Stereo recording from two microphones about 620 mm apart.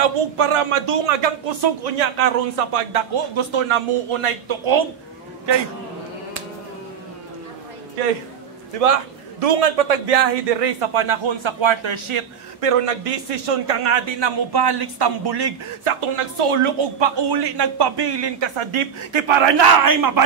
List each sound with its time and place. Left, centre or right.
0.0 s speech: right
8.7 s a man's voice: right